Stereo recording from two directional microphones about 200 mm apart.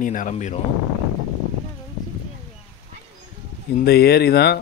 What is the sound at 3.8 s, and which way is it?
Speech, 50° left (ahead or behind).